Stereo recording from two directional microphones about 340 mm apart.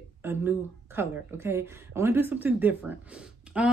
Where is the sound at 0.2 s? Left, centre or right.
Centre.